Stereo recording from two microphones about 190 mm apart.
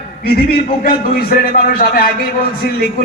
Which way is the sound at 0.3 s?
55° left (ahead or behind).